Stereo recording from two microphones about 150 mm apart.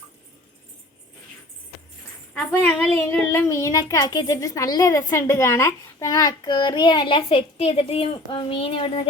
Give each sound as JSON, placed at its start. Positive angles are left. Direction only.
{"t": 2.3, "sound": "a child's voice", "side_deg": 10}